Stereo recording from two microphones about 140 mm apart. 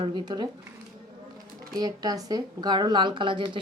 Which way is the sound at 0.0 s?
35° right (ahead or behind).